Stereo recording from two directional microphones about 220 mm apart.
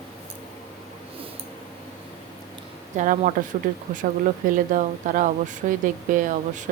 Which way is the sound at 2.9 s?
35° right (ahead or behind).